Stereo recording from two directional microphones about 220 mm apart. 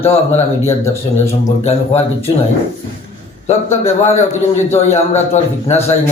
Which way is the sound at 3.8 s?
30° left (ahead or behind).